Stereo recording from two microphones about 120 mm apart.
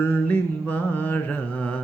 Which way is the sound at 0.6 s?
15° left (ahead or behind).